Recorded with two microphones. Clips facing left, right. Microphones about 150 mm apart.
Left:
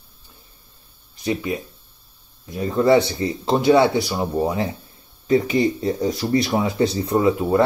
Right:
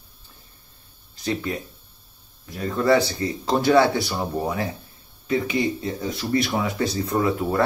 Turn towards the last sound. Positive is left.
turn(degrees=25)  # may be behind; listen again after turning